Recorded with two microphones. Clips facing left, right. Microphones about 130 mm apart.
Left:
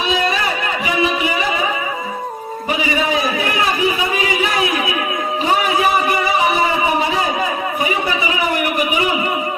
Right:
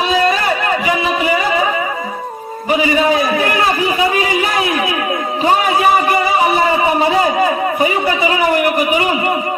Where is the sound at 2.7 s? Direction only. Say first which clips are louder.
Right 5 dB; 40° right (ahead or behind).